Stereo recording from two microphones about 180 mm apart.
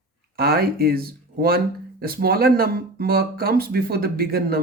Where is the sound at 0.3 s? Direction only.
60° right (ahead or behind).